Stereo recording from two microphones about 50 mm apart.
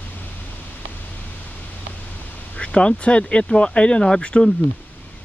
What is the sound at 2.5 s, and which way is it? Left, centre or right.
Speech, left.